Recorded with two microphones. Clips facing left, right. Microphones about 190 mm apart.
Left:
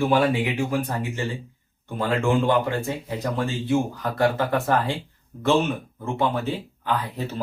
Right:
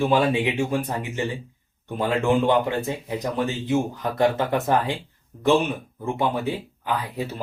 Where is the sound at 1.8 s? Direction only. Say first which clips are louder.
Right 1 dB; 20° right (ahead or behind).